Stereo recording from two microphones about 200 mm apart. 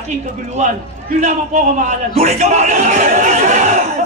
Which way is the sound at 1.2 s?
35° right (ahead or behind).